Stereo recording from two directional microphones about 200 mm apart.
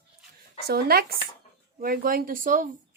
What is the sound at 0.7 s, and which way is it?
Speech, 50° right (ahead or behind).